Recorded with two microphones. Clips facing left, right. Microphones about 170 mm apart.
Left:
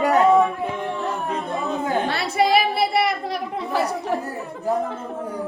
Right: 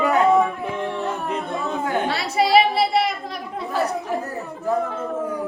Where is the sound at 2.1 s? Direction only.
55° left (ahead or behind).